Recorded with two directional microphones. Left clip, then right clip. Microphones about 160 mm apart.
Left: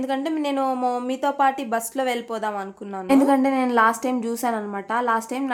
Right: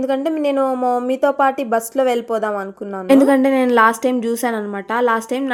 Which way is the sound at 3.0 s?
30° right (ahead or behind).